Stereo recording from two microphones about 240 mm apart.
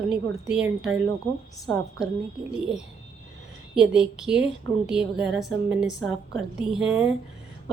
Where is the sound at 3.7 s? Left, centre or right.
Centre.